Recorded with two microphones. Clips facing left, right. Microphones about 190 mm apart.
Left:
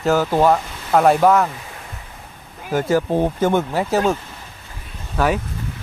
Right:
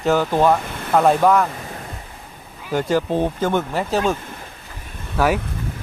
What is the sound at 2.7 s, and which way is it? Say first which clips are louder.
Speech: left 1 dB; 5° left (ahead or behind).